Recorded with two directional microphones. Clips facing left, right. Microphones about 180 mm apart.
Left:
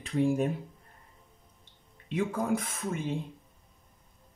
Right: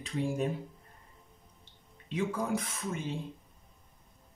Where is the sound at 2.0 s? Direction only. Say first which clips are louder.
Left 2 dB; 55° left (ahead or behind).